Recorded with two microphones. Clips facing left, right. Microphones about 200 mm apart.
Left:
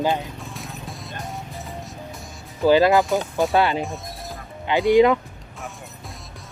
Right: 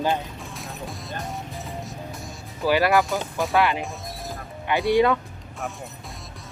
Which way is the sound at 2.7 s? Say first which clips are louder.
Left 4 dB; 20° left (ahead or behind).